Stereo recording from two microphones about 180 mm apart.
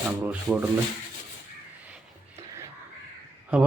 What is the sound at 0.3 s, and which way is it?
Speech, 5° right (ahead or behind).